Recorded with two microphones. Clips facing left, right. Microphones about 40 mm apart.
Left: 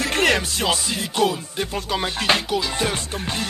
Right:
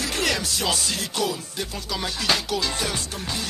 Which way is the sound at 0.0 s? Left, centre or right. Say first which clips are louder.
Left 6 dB; left.